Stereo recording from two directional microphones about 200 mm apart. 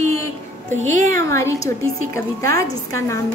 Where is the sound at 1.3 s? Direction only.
15° left (ahead or behind).